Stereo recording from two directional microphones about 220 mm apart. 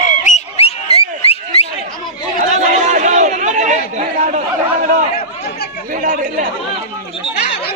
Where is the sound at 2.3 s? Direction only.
35° right (ahead or behind).